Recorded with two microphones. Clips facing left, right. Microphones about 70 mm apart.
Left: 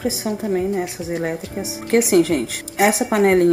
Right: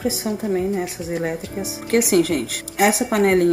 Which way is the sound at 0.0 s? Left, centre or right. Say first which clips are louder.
Even; centre.